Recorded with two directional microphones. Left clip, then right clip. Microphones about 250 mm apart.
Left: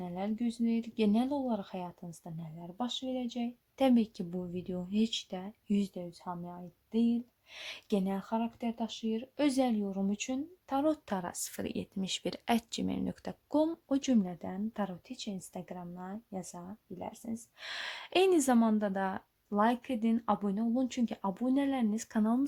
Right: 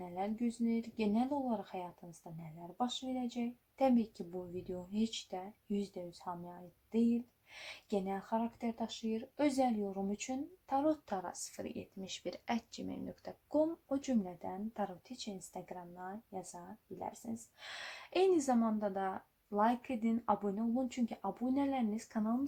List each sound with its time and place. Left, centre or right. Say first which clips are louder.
0.0 s speech: left 2 dB; left